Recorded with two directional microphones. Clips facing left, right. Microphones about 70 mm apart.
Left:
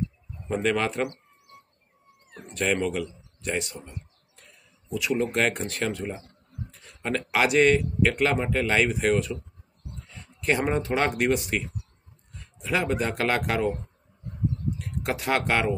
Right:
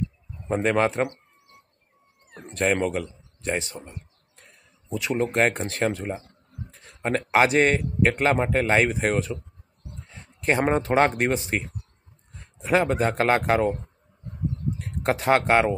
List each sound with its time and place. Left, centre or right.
0.5 s speech: right
2.5 s a man's voice: right
4.4 s a sound: right
5.3 s a man's voice: right
14.8 s speech: right